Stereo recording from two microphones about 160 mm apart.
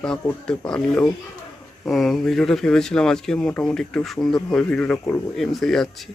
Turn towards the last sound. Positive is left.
turn(degrees=5)  # may be behind; listen again after turning